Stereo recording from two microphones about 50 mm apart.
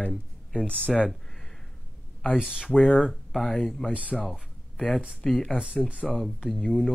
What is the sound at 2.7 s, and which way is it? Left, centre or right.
Speech, left.